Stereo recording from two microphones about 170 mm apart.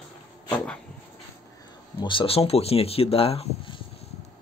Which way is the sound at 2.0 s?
30° left (ahead or behind).